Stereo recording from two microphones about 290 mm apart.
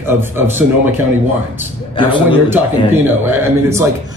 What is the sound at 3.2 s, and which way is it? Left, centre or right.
Speech, centre.